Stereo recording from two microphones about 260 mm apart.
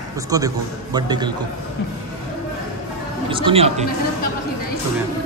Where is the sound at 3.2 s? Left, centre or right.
Centre.